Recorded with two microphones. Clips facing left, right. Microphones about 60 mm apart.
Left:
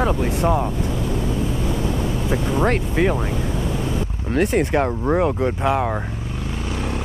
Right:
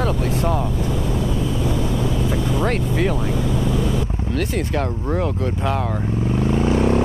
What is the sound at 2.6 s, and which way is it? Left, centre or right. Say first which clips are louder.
Speech: left 3 dB; centre.